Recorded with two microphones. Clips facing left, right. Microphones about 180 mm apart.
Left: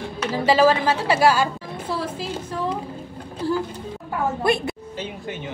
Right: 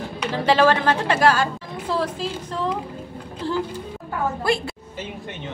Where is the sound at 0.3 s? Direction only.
5° left (ahead or behind).